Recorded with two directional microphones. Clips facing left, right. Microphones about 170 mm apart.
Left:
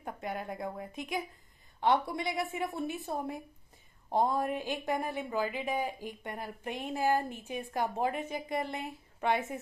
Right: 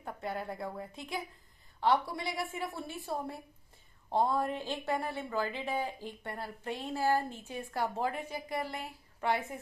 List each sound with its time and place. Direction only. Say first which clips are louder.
0.0 s a woman's voice: even; 20° left (ahead or behind)